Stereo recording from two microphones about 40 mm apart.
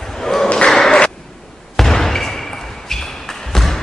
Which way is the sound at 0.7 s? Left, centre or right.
Left.